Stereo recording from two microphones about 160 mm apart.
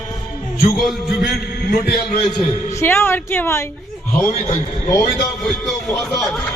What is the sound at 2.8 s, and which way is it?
Speech, 15° left (ahead or behind).